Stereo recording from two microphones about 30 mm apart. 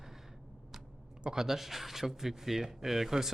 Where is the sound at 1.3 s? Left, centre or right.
Centre.